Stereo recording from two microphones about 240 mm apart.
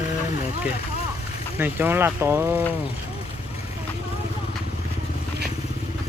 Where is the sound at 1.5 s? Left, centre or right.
Centre.